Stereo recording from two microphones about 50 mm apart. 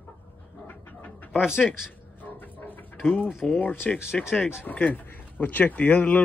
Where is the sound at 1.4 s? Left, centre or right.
Centre.